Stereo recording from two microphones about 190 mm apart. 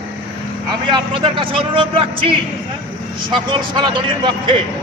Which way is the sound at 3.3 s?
25° right (ahead or behind).